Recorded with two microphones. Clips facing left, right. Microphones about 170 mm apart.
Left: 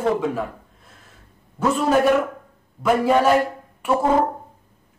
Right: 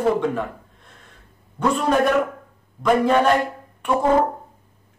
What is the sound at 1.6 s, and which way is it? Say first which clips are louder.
A man's voice: left 1 dB; 5° left (ahead or behind).